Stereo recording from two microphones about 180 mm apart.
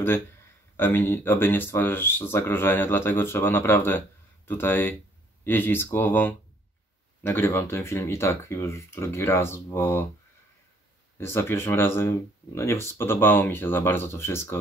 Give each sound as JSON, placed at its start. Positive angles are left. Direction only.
{"t": 0.7, "sound": "speech", "side_deg": 10}
{"t": 11.1, "sound": "speech", "side_deg": 15}